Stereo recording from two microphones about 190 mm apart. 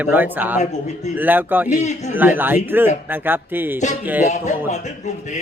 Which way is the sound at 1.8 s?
40° left (ahead or behind).